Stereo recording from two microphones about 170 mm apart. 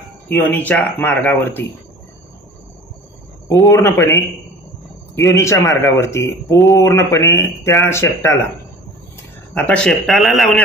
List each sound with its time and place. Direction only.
0.3 s speech: 10° left (ahead or behind)
3.4 s speech: 15° left (ahead or behind)
9.5 s a man's voice: 5° left (ahead or behind)